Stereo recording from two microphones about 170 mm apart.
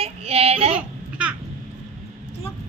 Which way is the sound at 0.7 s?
5° right (ahead or behind).